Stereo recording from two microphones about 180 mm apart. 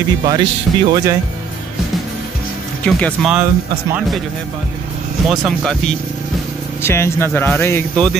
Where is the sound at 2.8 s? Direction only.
5° left (ahead or behind).